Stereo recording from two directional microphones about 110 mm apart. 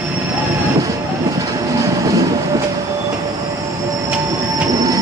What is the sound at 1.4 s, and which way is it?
Train, 30° right (ahead or behind).